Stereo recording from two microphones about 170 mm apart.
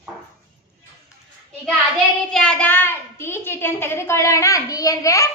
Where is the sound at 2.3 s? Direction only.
5° left (ahead or behind).